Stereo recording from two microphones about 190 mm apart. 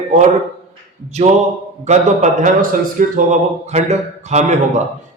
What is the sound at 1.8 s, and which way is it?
Speech, 40° right (ahead or behind).